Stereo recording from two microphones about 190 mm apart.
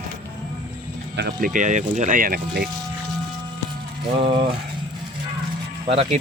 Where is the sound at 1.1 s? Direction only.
60° right (ahead or behind).